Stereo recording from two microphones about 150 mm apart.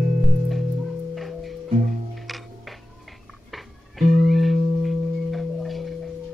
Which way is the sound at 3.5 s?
Centre (ahead or behind).